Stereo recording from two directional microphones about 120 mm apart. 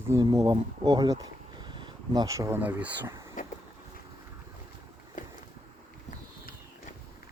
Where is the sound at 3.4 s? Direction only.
90° left.